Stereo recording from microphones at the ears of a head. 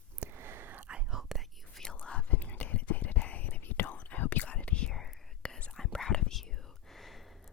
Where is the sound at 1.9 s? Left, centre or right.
Left.